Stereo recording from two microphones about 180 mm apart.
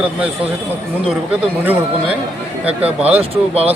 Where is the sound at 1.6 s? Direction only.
10° right (ahead or behind).